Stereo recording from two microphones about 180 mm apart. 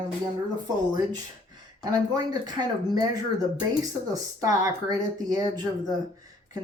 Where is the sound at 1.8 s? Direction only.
20° right (ahead or behind).